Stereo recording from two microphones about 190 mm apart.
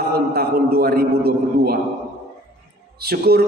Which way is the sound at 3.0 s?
55° right (ahead or behind).